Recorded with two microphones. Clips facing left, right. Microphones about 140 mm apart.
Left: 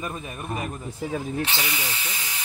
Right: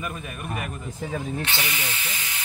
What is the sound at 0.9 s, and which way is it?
Speech, 10° left (ahead or behind).